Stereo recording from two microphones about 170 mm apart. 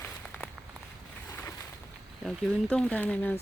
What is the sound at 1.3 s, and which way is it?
Boat, 20° left (ahead or behind).